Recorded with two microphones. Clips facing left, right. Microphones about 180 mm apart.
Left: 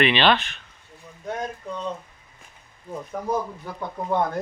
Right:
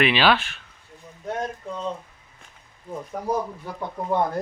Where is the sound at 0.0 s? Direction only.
5° right (ahead or behind).